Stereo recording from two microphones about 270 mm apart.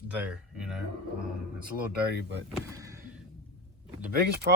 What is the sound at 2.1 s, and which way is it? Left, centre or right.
Speech, right.